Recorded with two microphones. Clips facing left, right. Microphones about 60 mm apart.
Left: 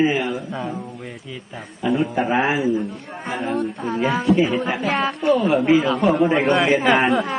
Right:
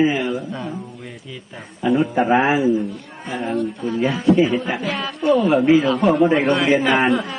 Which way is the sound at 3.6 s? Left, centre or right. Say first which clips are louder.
Right 1 dB; left.